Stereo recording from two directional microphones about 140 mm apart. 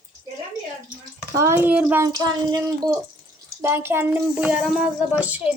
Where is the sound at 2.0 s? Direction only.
25° right (ahead or behind).